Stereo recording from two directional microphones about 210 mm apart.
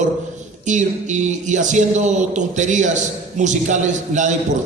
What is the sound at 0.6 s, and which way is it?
A man's voice, 35° right (ahead or behind).